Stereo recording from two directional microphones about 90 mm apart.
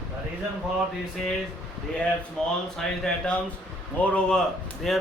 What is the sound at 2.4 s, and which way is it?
Speech, 10° left (ahead or behind).